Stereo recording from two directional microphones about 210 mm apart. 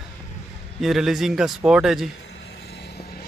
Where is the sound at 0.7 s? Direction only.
Centre (ahead or behind).